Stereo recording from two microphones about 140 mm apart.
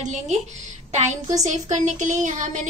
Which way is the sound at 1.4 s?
60° right (ahead or behind).